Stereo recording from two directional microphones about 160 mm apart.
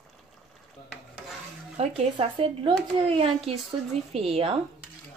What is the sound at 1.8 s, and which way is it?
Speech, 35° right (ahead or behind).